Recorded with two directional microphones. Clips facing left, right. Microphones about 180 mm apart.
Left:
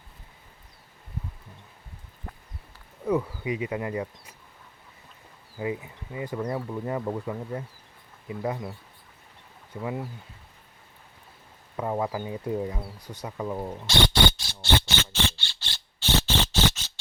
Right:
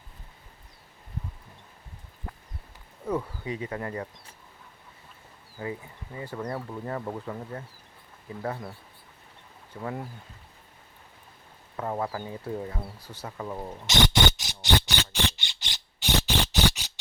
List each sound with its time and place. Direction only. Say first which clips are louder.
3.1 s speech: left 4 dB; 10° left (ahead or behind)
5.5 s speech: left 4 dB; 15° left (ahead or behind)
9.8 s speech: left 2 dB; 5° left (ahead or behind)
11.8 s speech: left 3 dB; 15° left (ahead or behind)
13.0 s speech: left 3 dB; 10° right (ahead or behind)
13.2 s speech: left 4 dB; 10° left (ahead or behind)
14.4 s a sound: left 1 dB; 15° right (ahead or behind)